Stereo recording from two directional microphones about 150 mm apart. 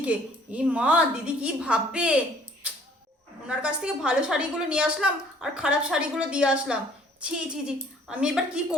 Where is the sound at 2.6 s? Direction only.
10° right (ahead or behind).